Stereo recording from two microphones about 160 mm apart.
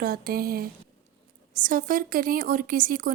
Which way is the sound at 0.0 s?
70° right (ahead or behind).